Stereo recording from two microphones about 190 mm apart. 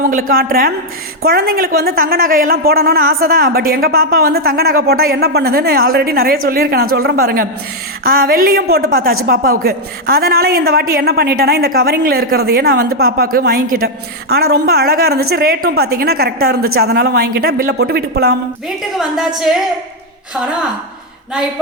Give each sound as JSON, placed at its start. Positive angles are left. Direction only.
{"t": 0.0, "sound": "a woman's voice", "side_deg": -50}
{"t": 18.9, "sound": "a woman's voice", "side_deg": -5}